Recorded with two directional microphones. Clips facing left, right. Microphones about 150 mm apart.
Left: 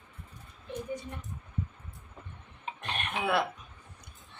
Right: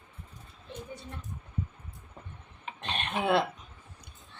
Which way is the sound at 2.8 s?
25° right (ahead or behind).